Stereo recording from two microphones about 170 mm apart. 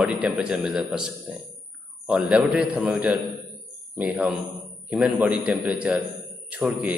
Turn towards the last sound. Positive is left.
turn(degrees=-10)  # may be behind; listen again after turning